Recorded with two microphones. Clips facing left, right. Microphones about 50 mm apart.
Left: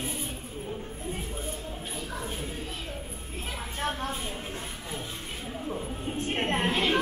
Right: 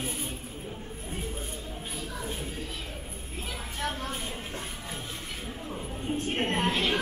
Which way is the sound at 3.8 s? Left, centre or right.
Left.